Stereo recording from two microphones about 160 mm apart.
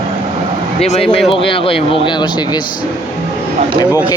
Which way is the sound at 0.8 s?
40° left (ahead or behind).